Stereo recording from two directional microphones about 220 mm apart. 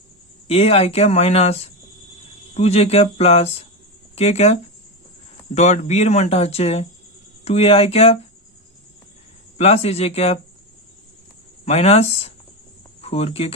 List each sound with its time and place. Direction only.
0.4 s speech: 25° left (ahead or behind)
9.6 s speech: 30° left (ahead or behind)
11.6 s speech: 30° left (ahead or behind)